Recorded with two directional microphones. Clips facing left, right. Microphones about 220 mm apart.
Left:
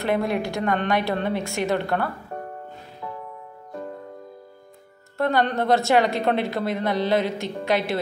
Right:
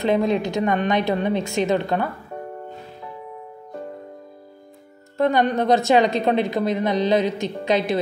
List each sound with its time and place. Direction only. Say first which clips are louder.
0.0 s a woman's voice: right 4 dB; 20° right (ahead or behind)
5.1 s a woman's voice: right 3 dB; 20° right (ahead or behind)